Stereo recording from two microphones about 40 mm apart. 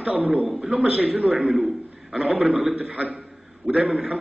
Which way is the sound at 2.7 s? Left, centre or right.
Right.